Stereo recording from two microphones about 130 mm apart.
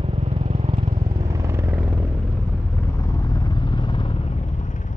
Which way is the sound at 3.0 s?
25° left (ahead or behind).